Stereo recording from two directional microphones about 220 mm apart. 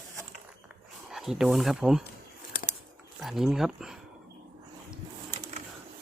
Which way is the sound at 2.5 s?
35° left (ahead or behind).